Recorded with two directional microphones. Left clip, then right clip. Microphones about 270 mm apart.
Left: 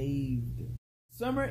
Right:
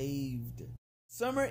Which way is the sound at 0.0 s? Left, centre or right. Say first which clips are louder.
Left 2 dB; right.